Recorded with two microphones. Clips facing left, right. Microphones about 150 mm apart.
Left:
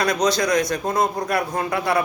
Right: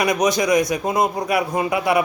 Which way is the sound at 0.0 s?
15° right (ahead or behind).